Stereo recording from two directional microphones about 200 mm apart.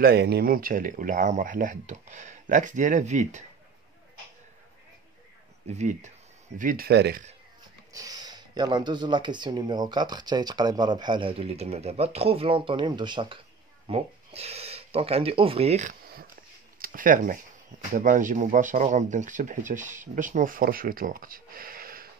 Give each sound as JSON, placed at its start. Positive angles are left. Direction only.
{"t": 0.0, "sound": "speech", "side_deg": -55}
{"t": 5.7, "sound": "speech", "side_deg": -35}
{"t": 7.9, "sound": "speech", "side_deg": -20}